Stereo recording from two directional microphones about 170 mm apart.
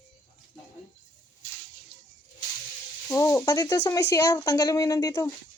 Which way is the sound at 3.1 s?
20° left (ahead or behind).